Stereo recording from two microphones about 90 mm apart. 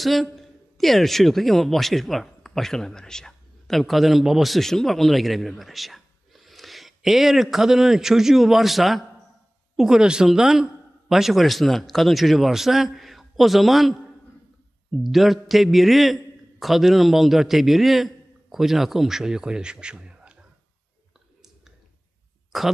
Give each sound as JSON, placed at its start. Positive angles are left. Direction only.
{"t": 0.0, "sound": "a man's voice", "side_deg": 0}
{"t": 22.5, "sound": "speech", "side_deg": 0}